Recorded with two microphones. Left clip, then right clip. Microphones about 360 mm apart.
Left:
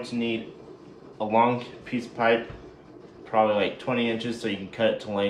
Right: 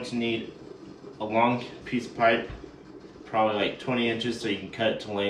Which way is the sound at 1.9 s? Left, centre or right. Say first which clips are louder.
Even; centre.